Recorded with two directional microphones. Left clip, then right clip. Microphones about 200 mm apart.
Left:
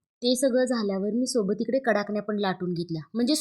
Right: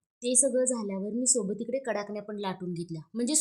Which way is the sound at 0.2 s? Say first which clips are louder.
Left 4 dB; 20° left (ahead or behind).